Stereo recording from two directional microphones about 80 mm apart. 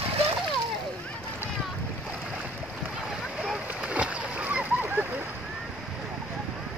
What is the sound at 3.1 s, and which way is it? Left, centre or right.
Splash, centre.